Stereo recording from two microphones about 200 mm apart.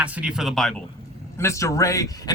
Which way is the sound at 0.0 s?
5° right (ahead or behind).